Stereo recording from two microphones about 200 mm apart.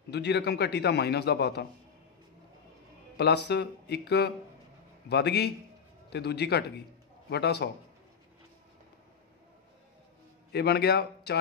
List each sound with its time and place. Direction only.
0.1 s a man's voice: 55° left (ahead or behind)
3.2 s a man's voice: 55° left (ahead or behind)
10.5 s a man's voice: 55° left (ahead or behind)